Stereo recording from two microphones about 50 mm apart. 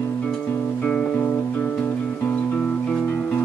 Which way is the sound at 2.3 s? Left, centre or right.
Left.